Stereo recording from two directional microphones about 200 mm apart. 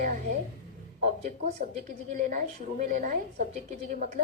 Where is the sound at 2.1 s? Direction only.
40° right (ahead or behind).